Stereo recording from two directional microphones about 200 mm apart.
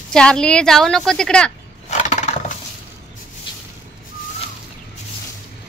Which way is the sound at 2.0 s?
35° left (ahead or behind).